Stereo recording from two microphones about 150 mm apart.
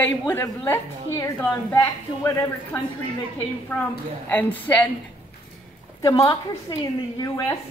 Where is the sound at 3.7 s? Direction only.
10° left (ahead or behind).